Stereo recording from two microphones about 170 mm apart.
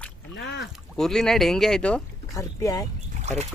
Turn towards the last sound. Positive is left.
turn(degrees=-40)  # may be behind; listen again after turning